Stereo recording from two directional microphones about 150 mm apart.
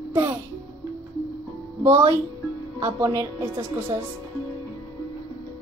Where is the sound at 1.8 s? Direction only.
20° right (ahead or behind).